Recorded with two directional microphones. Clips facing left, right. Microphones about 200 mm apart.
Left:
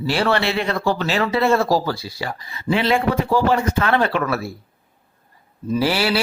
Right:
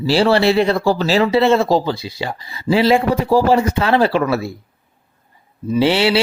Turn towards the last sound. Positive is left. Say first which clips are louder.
# right 5 dB
turn(degrees=-25)  # may be behind; listen again after turning